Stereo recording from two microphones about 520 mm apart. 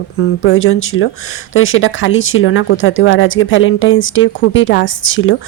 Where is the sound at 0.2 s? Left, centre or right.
Left.